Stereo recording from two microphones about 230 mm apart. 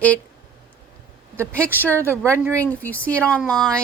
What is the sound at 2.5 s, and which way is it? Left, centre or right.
Speech, centre.